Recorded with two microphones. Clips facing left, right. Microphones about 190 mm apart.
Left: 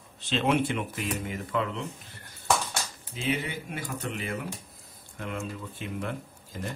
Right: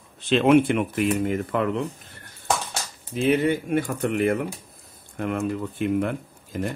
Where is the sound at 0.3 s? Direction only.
55° right (ahead or behind).